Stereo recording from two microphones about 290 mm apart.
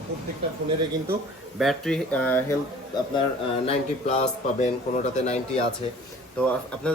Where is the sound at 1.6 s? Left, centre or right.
Centre.